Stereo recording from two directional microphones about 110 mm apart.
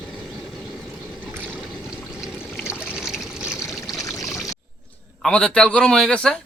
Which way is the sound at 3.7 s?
Centre (ahead or behind).